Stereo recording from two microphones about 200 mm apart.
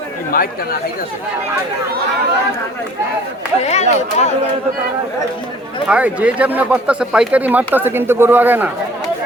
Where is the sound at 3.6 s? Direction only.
35° left (ahead or behind).